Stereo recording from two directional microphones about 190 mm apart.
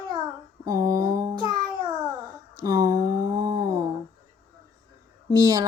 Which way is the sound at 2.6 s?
20° right (ahead or behind).